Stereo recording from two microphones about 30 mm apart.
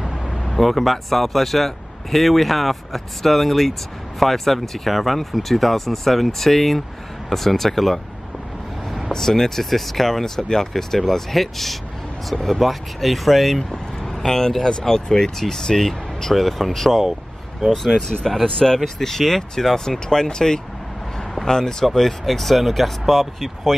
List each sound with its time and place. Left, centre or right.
0.0 s speech: centre
9.1 s speech: centre
13.6 s speech: centre
17.0 s vehicle: centre
17.6 s speech: centre
22.2 s speech: centre